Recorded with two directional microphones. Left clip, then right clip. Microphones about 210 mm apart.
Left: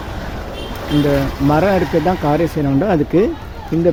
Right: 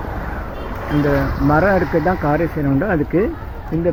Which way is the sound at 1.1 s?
15° left (ahead or behind).